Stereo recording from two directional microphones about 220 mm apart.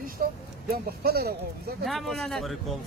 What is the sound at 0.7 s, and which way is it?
Speech, 45° right (ahead or behind).